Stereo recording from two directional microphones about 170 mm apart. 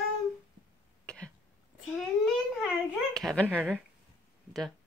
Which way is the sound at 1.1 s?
5° left (ahead or behind).